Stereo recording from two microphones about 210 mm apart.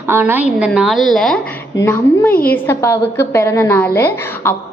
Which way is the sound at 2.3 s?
45° left (ahead or behind).